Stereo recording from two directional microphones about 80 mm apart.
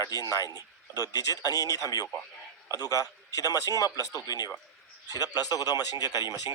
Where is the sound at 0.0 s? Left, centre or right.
Left.